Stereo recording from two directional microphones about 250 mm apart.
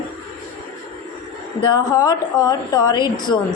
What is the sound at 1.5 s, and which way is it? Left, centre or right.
A woman's voice, centre.